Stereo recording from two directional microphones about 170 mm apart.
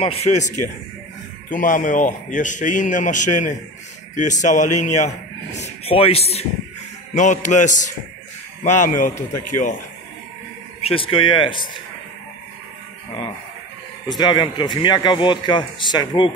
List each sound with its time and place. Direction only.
0.0 s a man's voice: 35° left (ahead or behind)
7.2 s a man's voice: 45° left (ahead or behind)
10.8 s speech: 35° left (ahead or behind)
14.0 s a man's voice: 25° left (ahead or behind)